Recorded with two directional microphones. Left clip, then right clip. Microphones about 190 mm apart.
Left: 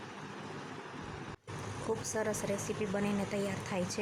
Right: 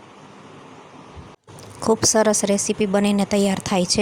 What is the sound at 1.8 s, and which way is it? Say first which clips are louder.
A woman's voice: right 18 dB; 40° right (ahead or behind).